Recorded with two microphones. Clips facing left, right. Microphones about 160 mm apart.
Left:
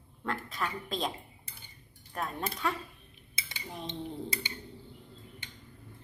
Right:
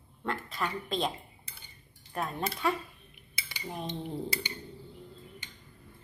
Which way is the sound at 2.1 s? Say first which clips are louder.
Right 2 dB; 5° right (ahead or behind).